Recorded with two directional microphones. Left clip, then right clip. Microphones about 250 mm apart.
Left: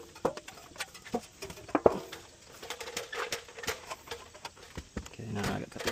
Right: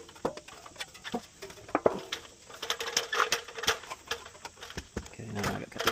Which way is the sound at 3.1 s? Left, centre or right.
Right.